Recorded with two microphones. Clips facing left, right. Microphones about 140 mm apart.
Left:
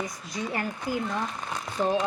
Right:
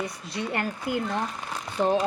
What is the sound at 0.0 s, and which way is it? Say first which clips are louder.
A woman's voice: right 1 dB; 65° right (ahead or behind).